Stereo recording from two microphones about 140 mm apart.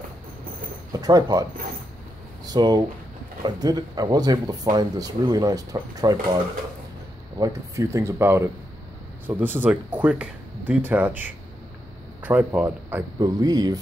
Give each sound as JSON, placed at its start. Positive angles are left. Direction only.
{"t": 1.0, "sound": "speech", "side_deg": -25}
{"t": 2.4, "sound": "speech", "side_deg": -30}
{"t": 7.3, "sound": "speech", "side_deg": -25}
{"t": 13.2, "sound": "speech", "side_deg": -25}